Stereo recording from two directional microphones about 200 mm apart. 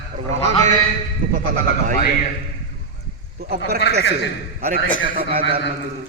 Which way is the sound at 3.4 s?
50° right (ahead or behind).